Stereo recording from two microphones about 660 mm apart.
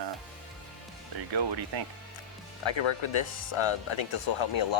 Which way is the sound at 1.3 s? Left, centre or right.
Right.